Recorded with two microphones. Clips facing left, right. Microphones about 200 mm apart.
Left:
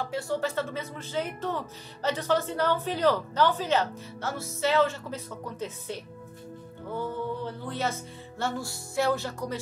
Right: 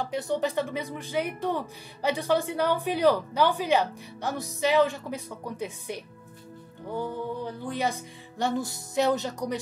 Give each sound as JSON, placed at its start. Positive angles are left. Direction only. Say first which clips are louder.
{"t": 0.0, "sound": "speech", "louder": "right 2 dB", "side_deg": -20}